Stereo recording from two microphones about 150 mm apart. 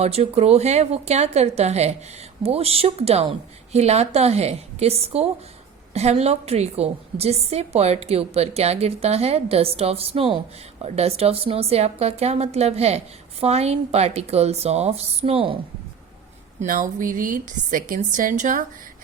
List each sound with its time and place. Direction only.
0.0 s a woman's voice: 45° right (ahead or behind)
16.6 s a woman's voice: 65° right (ahead or behind)